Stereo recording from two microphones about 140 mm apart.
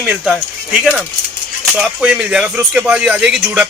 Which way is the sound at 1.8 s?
5° right (ahead or behind).